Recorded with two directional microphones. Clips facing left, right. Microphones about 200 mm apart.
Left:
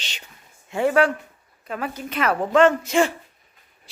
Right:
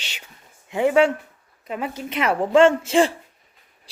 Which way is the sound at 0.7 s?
15° right (ahead or behind).